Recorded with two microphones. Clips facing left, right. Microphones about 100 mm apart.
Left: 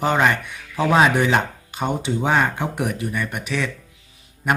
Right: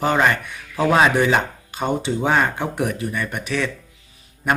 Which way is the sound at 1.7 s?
15° left (ahead or behind).